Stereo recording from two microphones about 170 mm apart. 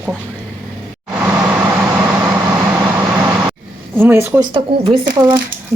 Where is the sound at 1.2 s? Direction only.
15° right (ahead or behind).